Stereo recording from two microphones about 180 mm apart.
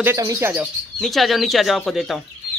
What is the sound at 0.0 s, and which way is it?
Speech, 15° right (ahead or behind).